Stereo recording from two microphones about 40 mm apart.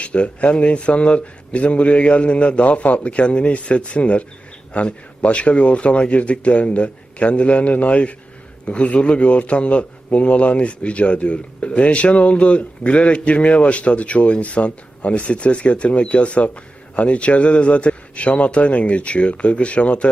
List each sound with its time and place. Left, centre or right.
0.0 s a man's voice: left